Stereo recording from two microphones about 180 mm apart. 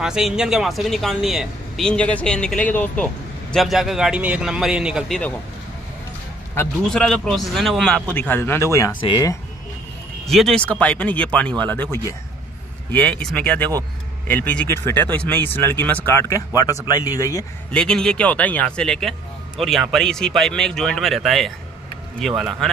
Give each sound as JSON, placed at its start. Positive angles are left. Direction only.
{"t": 0.0, "sound": "speech", "side_deg": -5}
{"t": 6.5, "sound": "speech", "side_deg": 5}
{"t": 10.2, "sound": "speech", "side_deg": 0}
{"t": 17.6, "sound": "speech", "side_deg": 5}